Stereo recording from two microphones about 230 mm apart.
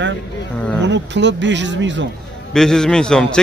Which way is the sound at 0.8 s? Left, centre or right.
Right.